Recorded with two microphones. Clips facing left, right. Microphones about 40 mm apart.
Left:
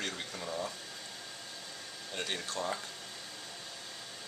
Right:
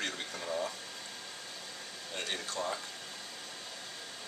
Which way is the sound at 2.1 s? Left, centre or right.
Centre.